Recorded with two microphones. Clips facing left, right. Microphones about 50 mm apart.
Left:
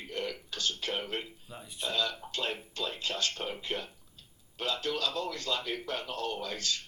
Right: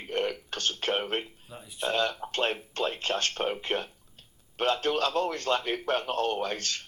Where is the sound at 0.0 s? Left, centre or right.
Right.